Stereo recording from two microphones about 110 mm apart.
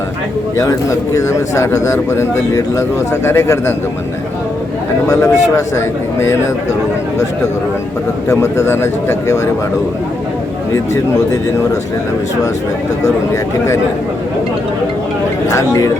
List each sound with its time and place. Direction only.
0.5 s speech: 30° left (ahead or behind)
5.0 s speech: 30° left (ahead or behind)
8.3 s speech: 25° left (ahead or behind)
10.9 s speech: 30° left (ahead or behind)
15.4 s speech: 30° left (ahead or behind)